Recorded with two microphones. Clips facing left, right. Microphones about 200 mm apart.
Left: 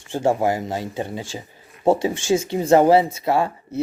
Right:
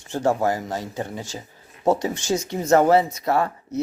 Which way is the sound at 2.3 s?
30° left (ahead or behind).